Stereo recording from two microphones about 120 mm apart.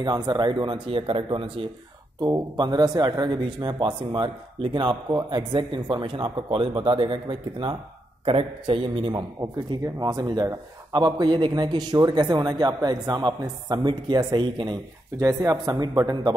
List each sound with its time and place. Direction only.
0.0 s a man's voice: 35° right (ahead or behind)
15.1 s a man's voice: 30° right (ahead or behind)